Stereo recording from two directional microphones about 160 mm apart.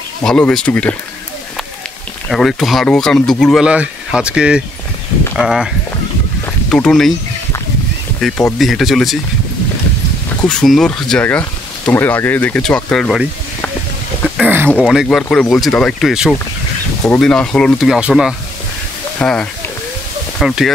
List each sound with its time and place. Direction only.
0.2 s speech: 5° left (ahead or behind)
2.2 s speech: centre (ahead or behind)
6.7 s speech: 5° left (ahead or behind)
8.2 s speech: 5° left (ahead or behind)
10.5 s speech: 5° left (ahead or behind)
14.4 s speech: 10° right (ahead or behind)